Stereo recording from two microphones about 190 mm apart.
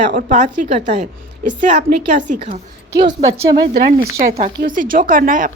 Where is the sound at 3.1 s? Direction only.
20° right (ahead or behind).